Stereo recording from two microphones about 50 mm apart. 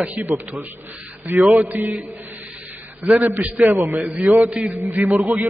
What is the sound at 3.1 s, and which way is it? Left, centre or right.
Speech, right.